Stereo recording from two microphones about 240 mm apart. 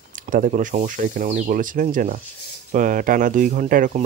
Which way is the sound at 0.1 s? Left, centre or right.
Right.